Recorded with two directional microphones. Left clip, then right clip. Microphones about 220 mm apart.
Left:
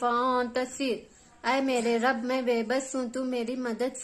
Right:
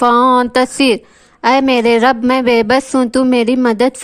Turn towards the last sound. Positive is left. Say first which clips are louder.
# right 18 dB
turn(degrees=-45)  # may be behind; listen again after turning